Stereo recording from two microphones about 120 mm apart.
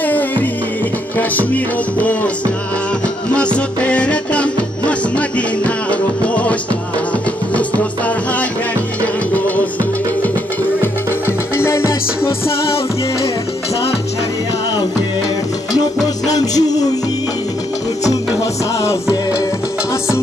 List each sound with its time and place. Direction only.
0.0 s music: 15° left (ahead or behind)
10.8 s music: 20° left (ahead or behind)
16.3 s music: 30° left (ahead or behind)
18.8 s music: 25° left (ahead or behind)